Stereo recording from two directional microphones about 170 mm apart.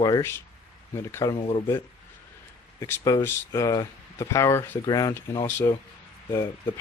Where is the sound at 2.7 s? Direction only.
15° left (ahead or behind).